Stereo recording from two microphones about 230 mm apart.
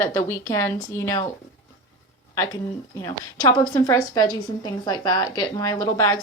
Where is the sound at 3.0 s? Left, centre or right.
Centre.